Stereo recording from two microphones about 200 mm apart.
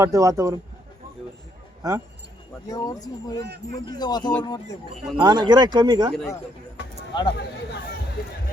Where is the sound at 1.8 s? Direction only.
15° right (ahead or behind).